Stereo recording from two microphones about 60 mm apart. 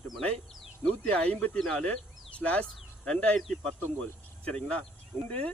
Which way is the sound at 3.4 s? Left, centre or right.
Centre.